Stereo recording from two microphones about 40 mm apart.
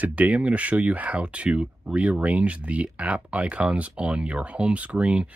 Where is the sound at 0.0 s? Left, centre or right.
Right.